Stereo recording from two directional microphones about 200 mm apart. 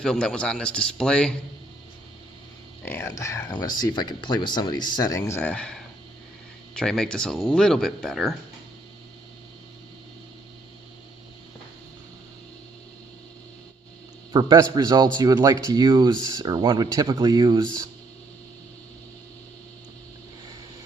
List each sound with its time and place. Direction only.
0.0 s speech: 5° left (ahead or behind)
2.8 s speech: 10° left (ahead or behind)
14.3 s speech: 20° right (ahead or behind)